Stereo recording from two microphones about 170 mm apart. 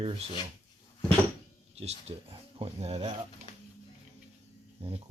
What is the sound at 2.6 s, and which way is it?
Speech, 40° right (ahead or behind).